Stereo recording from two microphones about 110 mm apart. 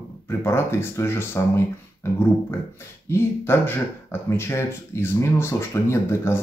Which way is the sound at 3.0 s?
20° left (ahead or behind).